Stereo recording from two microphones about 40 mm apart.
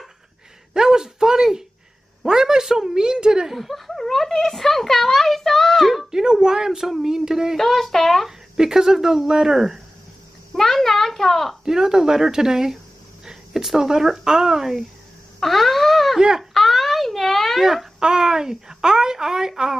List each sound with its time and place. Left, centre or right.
0.7 s speech: centre
3.5 s speech: centre
6.1 s speech: centre
7.5 s speech: centre
8.3 s speech: centre
10.5 s a sound: centre
11.6 s speech: centre
15.4 s wail: centre
16.2 s speech: centre
16.5 s wail: centre
17.6 s speech: centre